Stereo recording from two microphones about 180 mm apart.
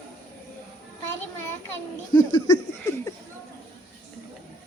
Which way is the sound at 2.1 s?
25° left (ahead or behind).